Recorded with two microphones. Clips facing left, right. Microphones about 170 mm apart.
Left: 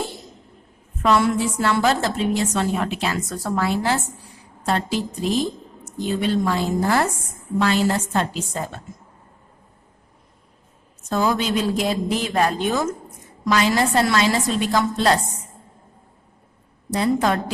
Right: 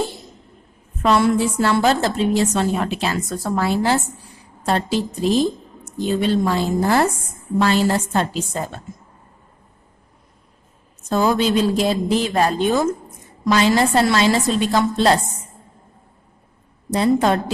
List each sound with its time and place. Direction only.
1.0 s a woman's voice: 30° right (ahead or behind)
11.1 s a woman's voice: 30° right (ahead or behind)
16.9 s a woman's voice: 25° right (ahead or behind)